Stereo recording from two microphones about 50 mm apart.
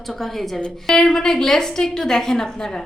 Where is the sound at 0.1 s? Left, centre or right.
Centre.